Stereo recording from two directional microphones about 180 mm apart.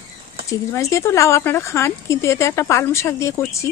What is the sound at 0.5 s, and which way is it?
Speech, 15° left (ahead or behind).